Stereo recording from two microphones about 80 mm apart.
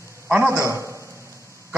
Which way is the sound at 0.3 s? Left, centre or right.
Right.